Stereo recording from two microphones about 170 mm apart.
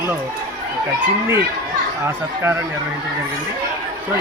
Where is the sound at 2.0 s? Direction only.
15° right (ahead or behind).